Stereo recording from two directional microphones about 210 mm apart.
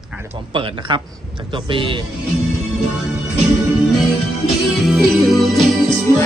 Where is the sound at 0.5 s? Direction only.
25° right (ahead or behind).